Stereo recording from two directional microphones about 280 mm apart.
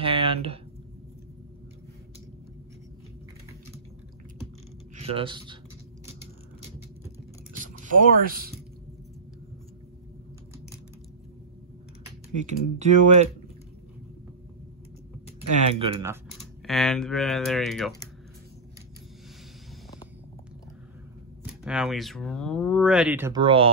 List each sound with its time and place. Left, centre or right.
0.0 s a sound: centre
4.9 s speech: centre
7.6 s speech: right
12.4 s speech: right
15.8 s speech: centre
16.6 s speech: centre
21.5 s speech: centre